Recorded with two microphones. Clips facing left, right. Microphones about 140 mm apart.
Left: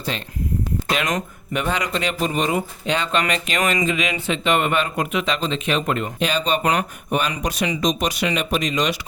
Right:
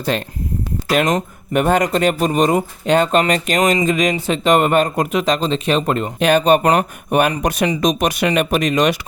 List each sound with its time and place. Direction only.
0.1 s speech: 55° right (ahead or behind)
1.5 s speech: 50° right (ahead or behind)
6.1 s speech: 55° right (ahead or behind)